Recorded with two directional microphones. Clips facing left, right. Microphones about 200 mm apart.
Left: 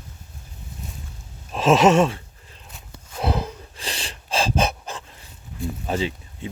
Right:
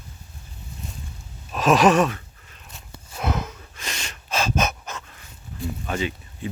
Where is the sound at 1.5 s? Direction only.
25° left (ahead or behind).